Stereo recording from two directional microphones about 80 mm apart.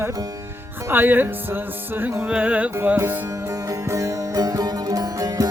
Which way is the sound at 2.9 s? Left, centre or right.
Right.